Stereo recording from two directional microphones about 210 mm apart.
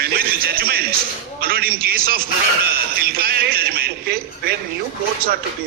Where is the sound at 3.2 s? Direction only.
45° right (ahead or behind).